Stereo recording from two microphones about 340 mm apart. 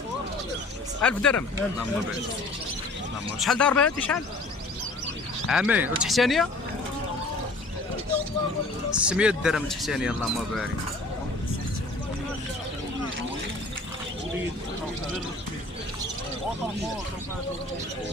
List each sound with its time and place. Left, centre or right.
1.0 s speech: centre
3.4 s speech: centre
5.5 s speech: centre
9.0 s speech: centre